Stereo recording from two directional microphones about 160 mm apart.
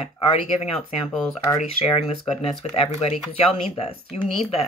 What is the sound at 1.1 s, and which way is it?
Speech, centre (ahead or behind).